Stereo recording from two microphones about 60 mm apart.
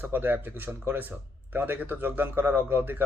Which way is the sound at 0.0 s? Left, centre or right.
Right.